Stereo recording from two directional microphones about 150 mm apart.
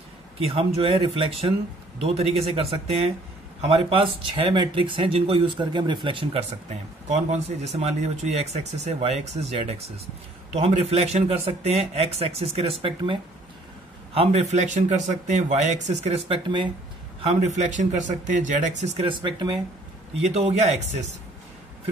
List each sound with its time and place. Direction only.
0.5 s speech: 40° right (ahead or behind)
6.7 s speech: 50° right (ahead or behind)
16.4 s speech: 30° right (ahead or behind)
17.2 s speech: 50° right (ahead or behind)
18.9 s speech: 35° right (ahead or behind)
20.2 s speech: 45° right (ahead or behind)